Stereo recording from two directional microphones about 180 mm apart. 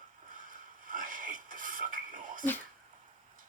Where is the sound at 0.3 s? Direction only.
45° right (ahead or behind).